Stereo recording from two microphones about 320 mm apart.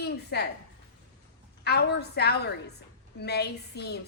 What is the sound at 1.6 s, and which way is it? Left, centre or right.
A woman's voice, left.